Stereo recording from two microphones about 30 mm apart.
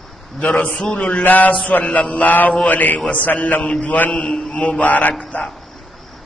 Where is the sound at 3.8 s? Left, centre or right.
Left.